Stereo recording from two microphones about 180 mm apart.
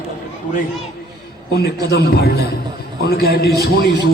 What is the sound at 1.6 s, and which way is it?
A man's voice, 65° left (ahead or behind).